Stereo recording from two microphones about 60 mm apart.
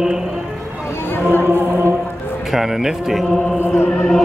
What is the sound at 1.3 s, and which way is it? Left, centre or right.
Music, left.